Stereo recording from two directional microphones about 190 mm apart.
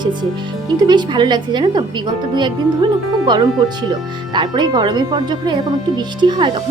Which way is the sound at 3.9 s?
25° right (ahead or behind).